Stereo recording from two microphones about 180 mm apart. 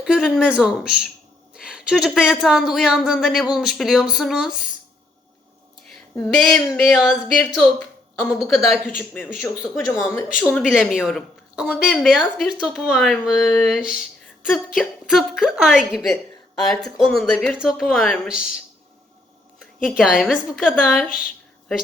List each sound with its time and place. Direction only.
0.0 s speech: 5° right (ahead or behind)
6.3 s speech: 5° left (ahead or behind)
9.8 s speech: 20° left (ahead or behind)
10.3 s speech: centre (ahead or behind)
19.5 s a woman's voice: 5° right (ahead or behind)